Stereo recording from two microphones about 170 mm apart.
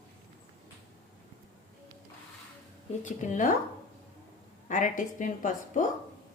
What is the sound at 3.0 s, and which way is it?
Speech, 45° left (ahead or behind).